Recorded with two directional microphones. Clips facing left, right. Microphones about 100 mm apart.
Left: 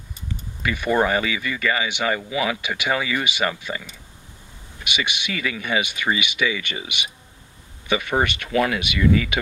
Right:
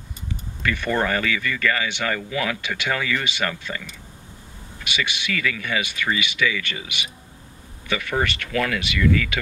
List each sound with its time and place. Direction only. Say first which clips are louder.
0.6 s speech: left 3 dB; 15° left (ahead or behind)
4.8 s speech: even; 20° left (ahead or behind)